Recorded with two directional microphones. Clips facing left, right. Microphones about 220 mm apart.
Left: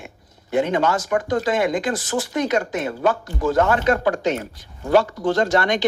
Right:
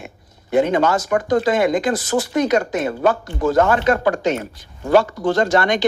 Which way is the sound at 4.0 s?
90° right.